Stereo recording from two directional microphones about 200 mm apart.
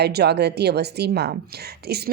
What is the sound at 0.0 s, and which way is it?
A woman's voice, 55° right (ahead or behind).